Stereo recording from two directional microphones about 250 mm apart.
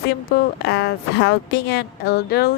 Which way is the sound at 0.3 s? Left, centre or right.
Left.